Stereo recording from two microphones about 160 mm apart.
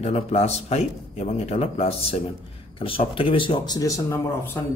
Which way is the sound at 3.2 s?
35° left (ahead or behind).